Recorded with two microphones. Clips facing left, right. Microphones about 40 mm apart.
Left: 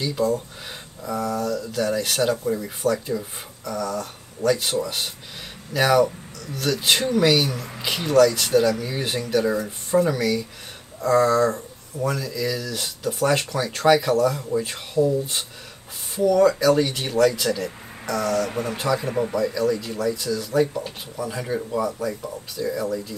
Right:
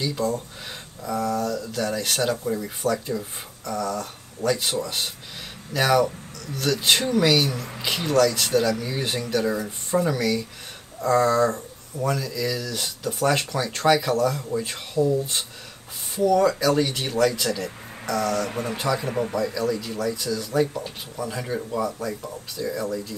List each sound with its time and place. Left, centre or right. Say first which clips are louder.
0.0 s speech: left 3 dB; centre